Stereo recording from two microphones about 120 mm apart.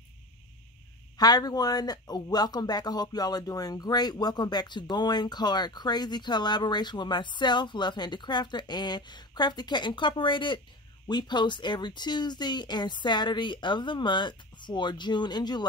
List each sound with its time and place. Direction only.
1.1 s a man's voice: 35° left (ahead or behind)